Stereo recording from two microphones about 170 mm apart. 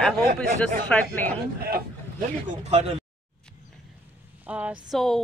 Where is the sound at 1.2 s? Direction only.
60° right (ahead or behind).